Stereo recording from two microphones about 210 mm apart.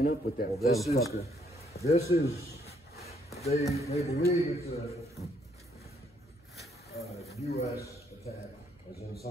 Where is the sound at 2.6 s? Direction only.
30° left (ahead or behind).